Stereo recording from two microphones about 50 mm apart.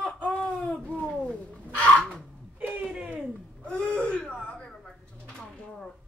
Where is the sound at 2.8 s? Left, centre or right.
Centre.